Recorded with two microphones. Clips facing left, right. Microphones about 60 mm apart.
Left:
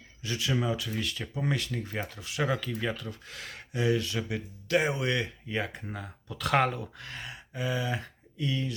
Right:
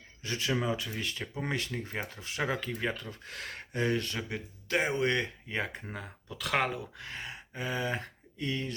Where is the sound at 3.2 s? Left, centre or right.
Right.